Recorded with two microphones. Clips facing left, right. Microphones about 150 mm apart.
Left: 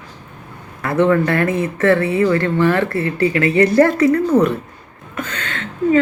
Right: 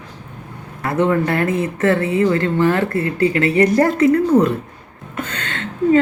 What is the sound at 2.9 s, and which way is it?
Speech, 30° left (ahead or behind).